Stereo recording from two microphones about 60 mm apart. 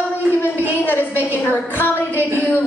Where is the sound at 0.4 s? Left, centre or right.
Left.